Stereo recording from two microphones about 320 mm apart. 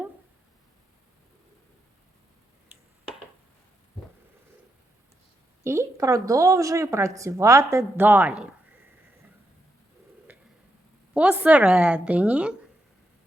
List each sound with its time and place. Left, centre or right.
5.6 s speech: centre
10.3 s a sound: centre
11.1 s a woman's voice: centre